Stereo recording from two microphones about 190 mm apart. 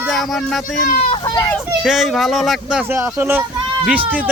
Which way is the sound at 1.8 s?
Centre (ahead or behind).